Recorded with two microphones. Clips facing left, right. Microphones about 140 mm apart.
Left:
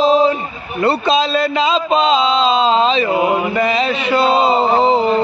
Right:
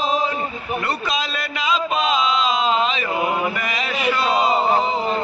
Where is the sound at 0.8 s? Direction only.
30° left (ahead or behind).